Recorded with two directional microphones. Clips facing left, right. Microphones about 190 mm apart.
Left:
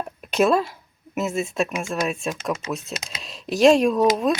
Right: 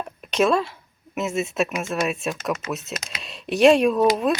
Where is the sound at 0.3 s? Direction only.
5° left (ahead or behind).